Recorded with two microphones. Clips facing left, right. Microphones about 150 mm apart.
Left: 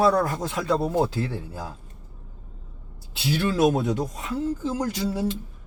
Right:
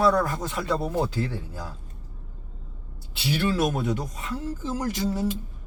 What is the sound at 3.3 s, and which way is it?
Speech, 25° left (ahead or behind).